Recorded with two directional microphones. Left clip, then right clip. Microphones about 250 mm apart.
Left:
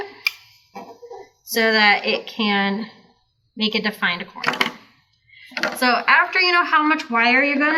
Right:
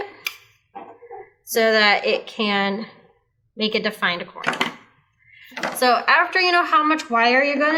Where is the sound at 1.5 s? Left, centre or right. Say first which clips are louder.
Even; right.